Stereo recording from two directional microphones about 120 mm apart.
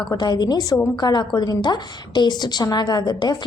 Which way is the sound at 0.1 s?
35° left (ahead or behind).